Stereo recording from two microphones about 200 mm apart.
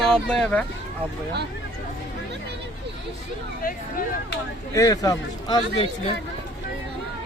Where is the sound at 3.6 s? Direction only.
45° left (ahead or behind).